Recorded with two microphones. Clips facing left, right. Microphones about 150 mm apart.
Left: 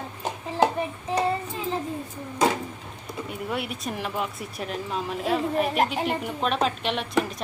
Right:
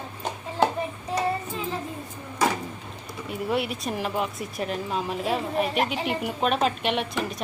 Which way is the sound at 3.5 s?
Centre (ahead or behind).